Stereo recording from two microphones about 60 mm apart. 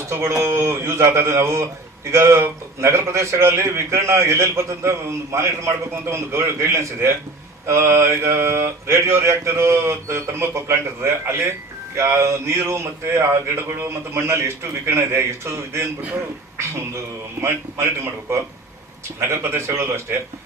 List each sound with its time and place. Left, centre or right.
0.1 s a sound: right
0.4 s a man's voice: right
17.4 s a man's voice: right